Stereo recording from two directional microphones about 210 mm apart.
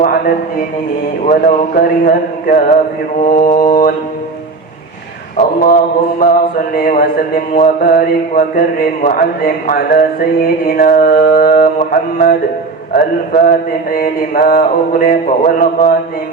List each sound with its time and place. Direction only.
1.3 s speech: 40° left (ahead or behind)
3.3 s mantra: 20° left (ahead or behind)
3.7 s speech: 40° left (ahead or behind)
5.6 s speech: 40° left (ahead or behind)